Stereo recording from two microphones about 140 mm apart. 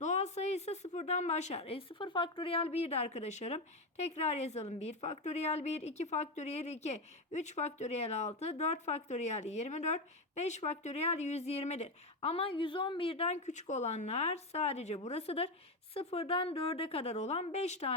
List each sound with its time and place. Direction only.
0.0 s speech: 55° left (ahead or behind)